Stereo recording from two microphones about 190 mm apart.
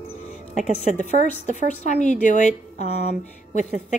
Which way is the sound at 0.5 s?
40° left (ahead or behind).